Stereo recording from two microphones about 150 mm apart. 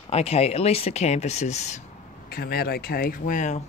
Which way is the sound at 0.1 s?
45° left (ahead or behind).